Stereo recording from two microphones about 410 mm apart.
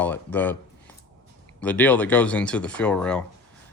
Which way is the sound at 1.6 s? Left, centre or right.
Centre.